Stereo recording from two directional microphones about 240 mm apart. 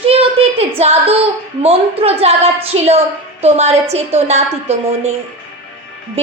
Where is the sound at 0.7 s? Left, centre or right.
Right.